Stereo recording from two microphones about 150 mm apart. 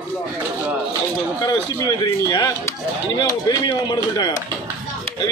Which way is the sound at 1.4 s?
30° left (ahead or behind).